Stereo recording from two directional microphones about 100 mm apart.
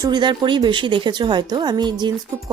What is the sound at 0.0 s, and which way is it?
A woman's voice, 45° right (ahead or behind).